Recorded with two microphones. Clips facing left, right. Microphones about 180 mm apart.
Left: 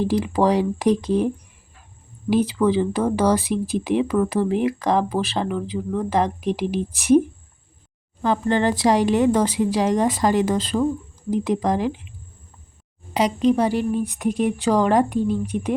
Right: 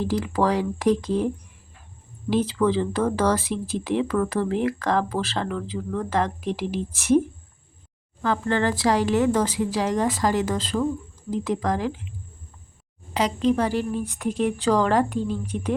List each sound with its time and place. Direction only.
0.0 s a woman's voice: 20° left (ahead or behind)
2.3 s speech: 10° left (ahead or behind)
8.2 s a woman's voice: 20° left (ahead or behind)
13.1 s speech: 15° left (ahead or behind)